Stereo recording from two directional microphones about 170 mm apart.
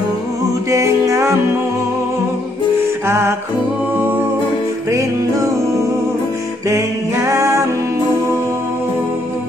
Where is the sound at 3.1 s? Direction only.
15° right (ahead or behind).